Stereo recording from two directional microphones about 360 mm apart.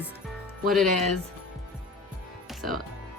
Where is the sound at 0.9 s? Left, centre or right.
Centre.